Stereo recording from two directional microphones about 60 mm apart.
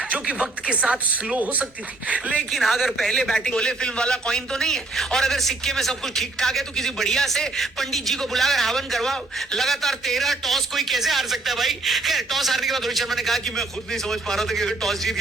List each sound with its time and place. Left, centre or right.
0.1 s speech: centre
2.5 s a man's voice: centre